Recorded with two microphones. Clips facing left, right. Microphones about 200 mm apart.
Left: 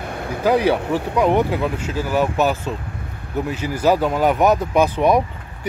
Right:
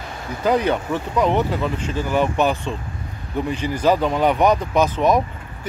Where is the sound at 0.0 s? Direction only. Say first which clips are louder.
Left 4 dB; 60° left (ahead or behind).